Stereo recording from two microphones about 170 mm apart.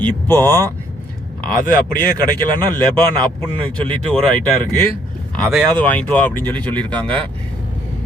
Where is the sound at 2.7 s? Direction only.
25° right (ahead or behind).